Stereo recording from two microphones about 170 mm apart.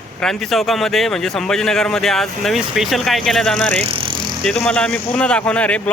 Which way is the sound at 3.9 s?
30° right (ahead or behind).